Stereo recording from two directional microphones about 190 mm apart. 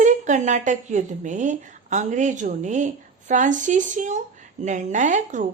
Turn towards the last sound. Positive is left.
turn(degrees=-40)  # may be behind; listen again after turning